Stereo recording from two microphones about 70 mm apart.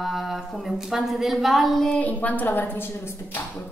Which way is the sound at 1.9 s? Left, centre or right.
Left.